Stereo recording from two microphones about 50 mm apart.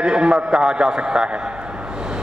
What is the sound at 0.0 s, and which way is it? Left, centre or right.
A man's voice, centre.